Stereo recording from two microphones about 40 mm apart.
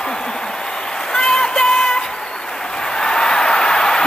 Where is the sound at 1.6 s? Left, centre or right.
Centre.